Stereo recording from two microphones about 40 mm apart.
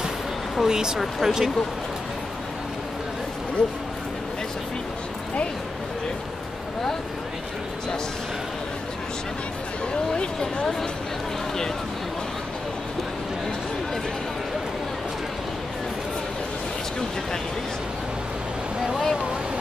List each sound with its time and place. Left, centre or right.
0.6 s speech: centre
3.6 s speech: left
10.1 s speech: left
18.8 s a sound: centre